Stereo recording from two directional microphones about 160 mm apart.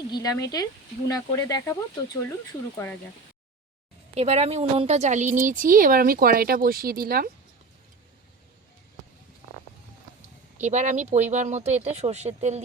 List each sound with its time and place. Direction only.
0.1 s speech: 20° left (ahead or behind)
2.7 s speech: 15° left (ahead or behind)
4.1 s speech: 40° right (ahead or behind); by 7.3 s 65° right (ahead or behind)
10.6 s speech: 45° right (ahead or behind)